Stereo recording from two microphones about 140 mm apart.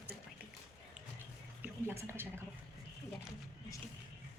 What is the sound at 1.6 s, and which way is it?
Speech, 15° right (ahead or behind).